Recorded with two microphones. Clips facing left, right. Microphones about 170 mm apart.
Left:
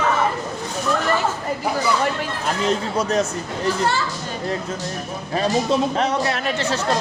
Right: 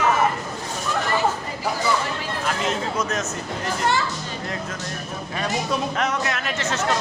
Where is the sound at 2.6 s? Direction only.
35° left (ahead or behind).